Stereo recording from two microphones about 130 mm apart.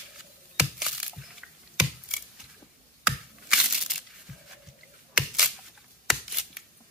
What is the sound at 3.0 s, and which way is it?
Crushing, 5° right (ahead or behind).